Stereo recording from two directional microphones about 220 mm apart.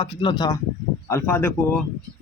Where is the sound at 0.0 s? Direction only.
20° left (ahead or behind).